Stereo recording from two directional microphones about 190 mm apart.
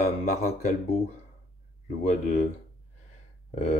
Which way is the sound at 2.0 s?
40° left (ahead or behind).